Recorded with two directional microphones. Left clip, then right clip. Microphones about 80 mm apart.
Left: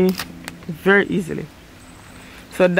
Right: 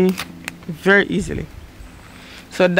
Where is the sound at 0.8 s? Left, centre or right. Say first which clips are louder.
Right 1 dB; right.